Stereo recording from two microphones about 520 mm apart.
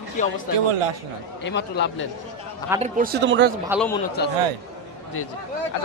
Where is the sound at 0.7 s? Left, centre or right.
Right.